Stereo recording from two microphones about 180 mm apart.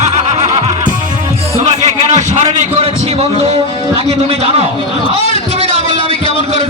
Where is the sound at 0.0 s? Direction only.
40° right (ahead or behind).